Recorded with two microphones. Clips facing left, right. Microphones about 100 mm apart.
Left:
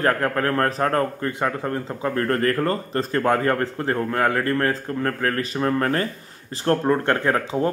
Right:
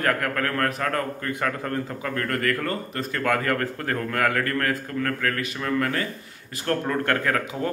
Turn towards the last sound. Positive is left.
turn(degrees=30)  # may be behind; listen again after turning